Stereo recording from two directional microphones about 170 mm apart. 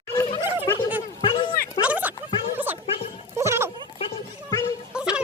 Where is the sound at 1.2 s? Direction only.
30° left (ahead or behind).